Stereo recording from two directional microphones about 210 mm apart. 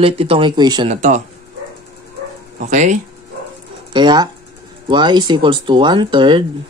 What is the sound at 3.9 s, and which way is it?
Speech, 20° right (ahead or behind).